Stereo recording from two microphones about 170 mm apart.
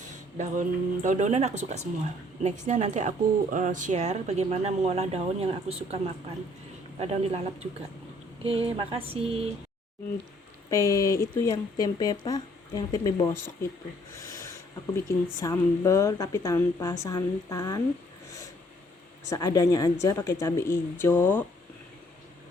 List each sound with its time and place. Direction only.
0.0 s speech: 50° right (ahead or behind)
7.0 s speech: 35° right (ahead or behind)
8.4 s speech: 35° right (ahead or behind)
10.7 s speech: 20° left (ahead or behind)
14.2 s a sound: 15° left (ahead or behind)
15.0 s speech: 20° left (ahead or behind)
19.3 s speech: 20° left (ahead or behind)